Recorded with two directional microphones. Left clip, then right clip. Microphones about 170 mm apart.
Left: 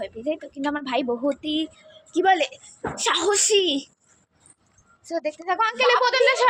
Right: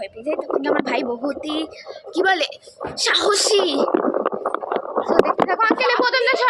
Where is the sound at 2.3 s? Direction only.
10° right (ahead or behind).